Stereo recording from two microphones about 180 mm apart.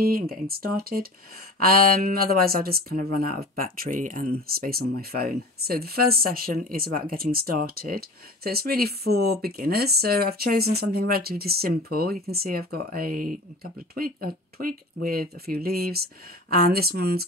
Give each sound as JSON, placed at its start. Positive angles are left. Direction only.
{"t": 0.0, "sound": "speech", "side_deg": -55}